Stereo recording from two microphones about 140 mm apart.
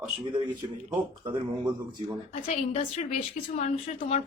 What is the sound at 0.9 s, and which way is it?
Speech, 35° right (ahead or behind).